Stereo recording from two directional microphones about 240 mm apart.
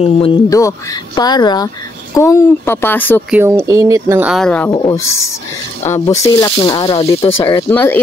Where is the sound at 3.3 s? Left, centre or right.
Centre.